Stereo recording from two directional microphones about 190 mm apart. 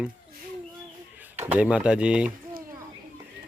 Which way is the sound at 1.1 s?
10° right (ahead or behind).